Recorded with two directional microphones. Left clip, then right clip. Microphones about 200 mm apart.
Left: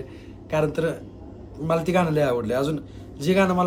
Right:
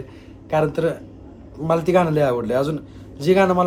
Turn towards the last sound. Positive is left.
turn(degrees=0)  # may be behind; listen again after turning